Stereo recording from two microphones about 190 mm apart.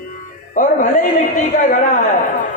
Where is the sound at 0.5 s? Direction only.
45° left (ahead or behind).